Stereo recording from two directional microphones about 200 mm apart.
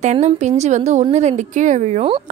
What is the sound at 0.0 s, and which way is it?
Speech, 35° right (ahead or behind).